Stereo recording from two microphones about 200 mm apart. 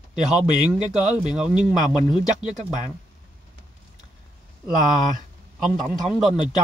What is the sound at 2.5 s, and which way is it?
Speech, 35° right (ahead or behind).